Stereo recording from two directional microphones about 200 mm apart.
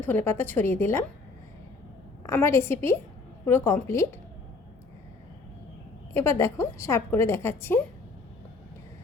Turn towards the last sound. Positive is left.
turn(degrees=10)  # may be behind; listen again after turning